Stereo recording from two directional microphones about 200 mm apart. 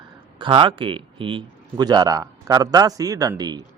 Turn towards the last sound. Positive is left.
turn(degrees=-20)  # may be behind; listen again after turning